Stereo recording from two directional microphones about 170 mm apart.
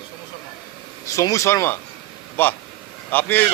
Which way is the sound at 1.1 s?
20° left (ahead or behind).